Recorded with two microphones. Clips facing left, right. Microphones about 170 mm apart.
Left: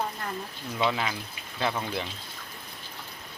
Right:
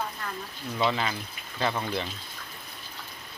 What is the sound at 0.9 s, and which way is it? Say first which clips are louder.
Speech: even; 5° left (ahead or behind).